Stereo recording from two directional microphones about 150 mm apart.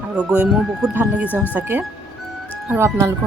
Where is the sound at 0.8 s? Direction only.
10° right (ahead or behind).